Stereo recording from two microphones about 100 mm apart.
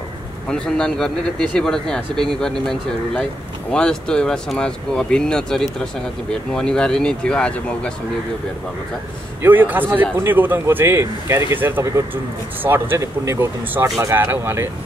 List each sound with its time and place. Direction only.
0.5 s speech: 5° left (ahead or behind)
9.4 s speech: 20° right (ahead or behind)